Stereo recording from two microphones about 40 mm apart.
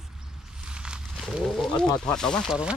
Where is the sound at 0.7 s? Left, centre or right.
Right.